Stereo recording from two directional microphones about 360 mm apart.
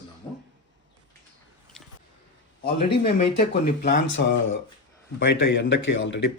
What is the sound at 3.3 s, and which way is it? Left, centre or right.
Speech, left.